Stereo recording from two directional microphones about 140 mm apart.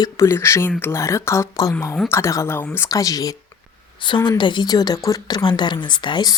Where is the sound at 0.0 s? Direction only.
20° left (ahead or behind).